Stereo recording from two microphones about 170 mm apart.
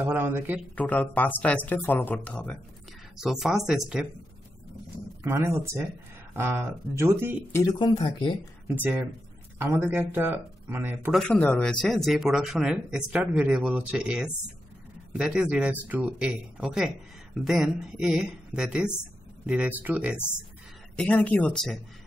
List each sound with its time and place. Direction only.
0.0 s speech: 10° right (ahead or behind)
0.7 s speech: 10° left (ahead or behind)
5.2 s speech: 15° right (ahead or behind)
7.5 s speech: 25° left (ahead or behind)
9.6 s speech: 15° right (ahead or behind)
11.1 s speech: 5° left (ahead or behind); by 20.2 s 10° right (ahead or behind)
20.9 s speech: 5° left (ahead or behind)